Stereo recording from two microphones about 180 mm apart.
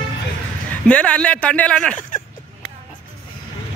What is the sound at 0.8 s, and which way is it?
Speech, 5° left (ahead or behind).